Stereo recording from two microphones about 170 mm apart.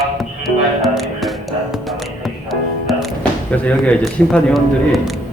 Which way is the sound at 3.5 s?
10° left (ahead or behind).